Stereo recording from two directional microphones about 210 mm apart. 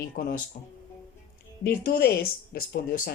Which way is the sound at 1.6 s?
45° left (ahead or behind).